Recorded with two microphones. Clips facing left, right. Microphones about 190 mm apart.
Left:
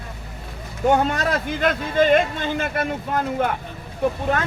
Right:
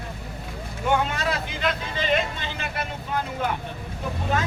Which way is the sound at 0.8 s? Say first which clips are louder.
Left 5 dB; 40° left (ahead or behind).